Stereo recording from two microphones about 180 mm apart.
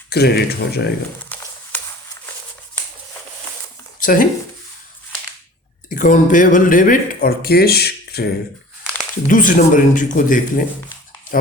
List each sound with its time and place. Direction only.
0.1 s speech: 65° left (ahead or behind)
1.3 s a sound: 10° left (ahead or behind)
4.0 s speech: 50° left (ahead or behind)
5.9 s speech: 45° left (ahead or behind)
9.2 s speech: 50° left (ahead or behind)